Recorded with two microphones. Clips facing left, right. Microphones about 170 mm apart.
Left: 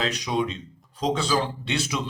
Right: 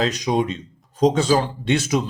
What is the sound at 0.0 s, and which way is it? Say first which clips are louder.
Speech: right 5 dB; 40° right (ahead or behind).